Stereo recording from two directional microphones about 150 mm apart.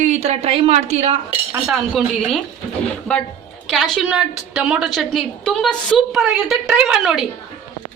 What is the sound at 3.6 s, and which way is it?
A woman's voice, centre (ahead or behind).